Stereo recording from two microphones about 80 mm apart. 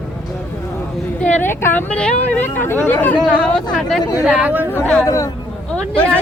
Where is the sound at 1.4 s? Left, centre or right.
Left.